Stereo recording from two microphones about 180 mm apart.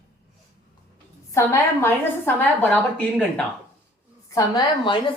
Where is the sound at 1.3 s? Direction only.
15° left (ahead or behind).